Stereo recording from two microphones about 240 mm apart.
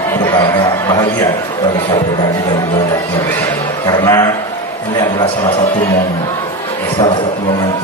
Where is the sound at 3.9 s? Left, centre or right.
Centre.